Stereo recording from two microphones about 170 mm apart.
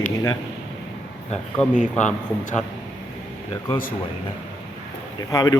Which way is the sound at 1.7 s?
45° left (ahead or behind).